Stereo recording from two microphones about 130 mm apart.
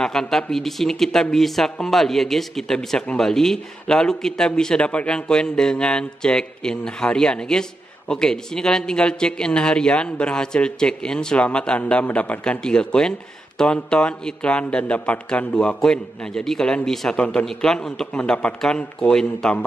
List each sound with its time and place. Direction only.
0.0 s a man's voice: 5° left (ahead or behind)